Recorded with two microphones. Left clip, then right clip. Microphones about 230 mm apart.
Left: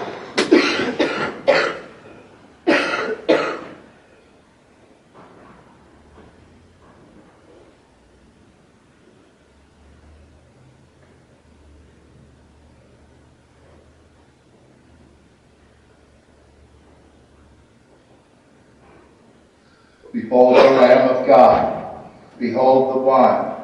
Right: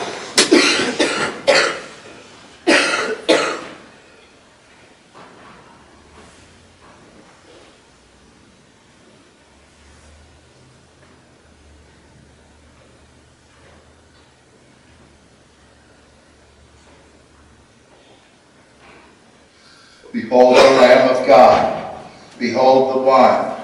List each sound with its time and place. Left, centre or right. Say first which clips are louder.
0.0 s cough: right 5 dB; centre
5.1 s a sound: right 3 dB; centre
20.1 s drawer open or close: right 2 dB; centre
20.4 s a man's voice: right 2 dB; centre
21.5 s a sound: right 2 dB; centre
22.4 s a man's voice: right 2 dB; centre